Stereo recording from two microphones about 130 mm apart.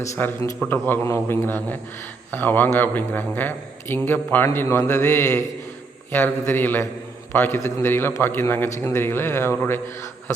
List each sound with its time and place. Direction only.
0.2 s a man's voice: 15° left (ahead or behind)